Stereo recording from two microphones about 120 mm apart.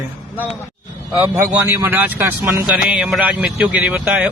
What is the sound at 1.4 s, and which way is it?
A man's voice, 20° right (ahead or behind).